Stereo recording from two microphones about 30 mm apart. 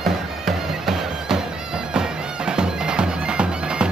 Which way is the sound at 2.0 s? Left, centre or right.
Right.